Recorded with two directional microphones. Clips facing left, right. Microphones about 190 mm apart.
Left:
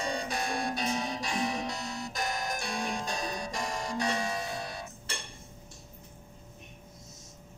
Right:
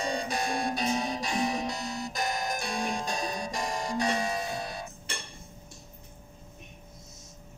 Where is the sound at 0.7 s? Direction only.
40° right (ahead or behind).